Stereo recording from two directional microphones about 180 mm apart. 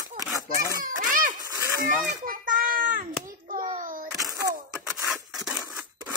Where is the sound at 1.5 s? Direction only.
20° right (ahead or behind).